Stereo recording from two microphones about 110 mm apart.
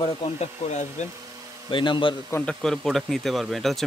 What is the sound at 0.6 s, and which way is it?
Speech, 85° left.